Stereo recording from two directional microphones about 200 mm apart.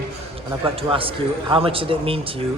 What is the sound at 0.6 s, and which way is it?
A man's voice, 25° right (ahead or behind).